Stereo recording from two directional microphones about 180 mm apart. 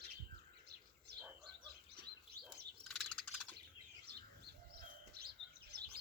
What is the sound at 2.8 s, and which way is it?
Bird, centre (ahead or behind).